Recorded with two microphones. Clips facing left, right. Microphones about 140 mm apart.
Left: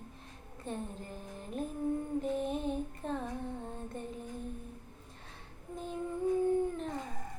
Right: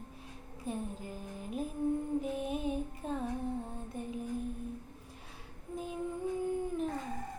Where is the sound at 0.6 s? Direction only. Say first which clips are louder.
Right 1 dB; 5° right (ahead or behind).